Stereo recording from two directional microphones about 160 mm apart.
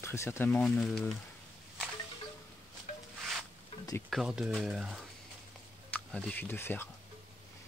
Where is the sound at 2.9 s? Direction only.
50° left (ahead or behind).